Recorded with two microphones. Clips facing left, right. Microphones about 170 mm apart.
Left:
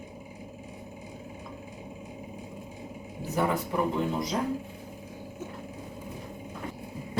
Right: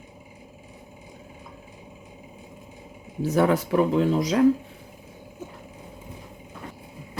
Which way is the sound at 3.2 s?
90° right.